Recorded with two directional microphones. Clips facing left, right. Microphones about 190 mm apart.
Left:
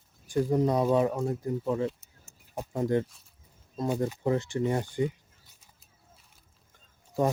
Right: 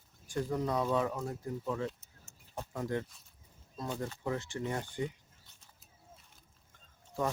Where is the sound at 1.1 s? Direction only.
30° left (ahead or behind).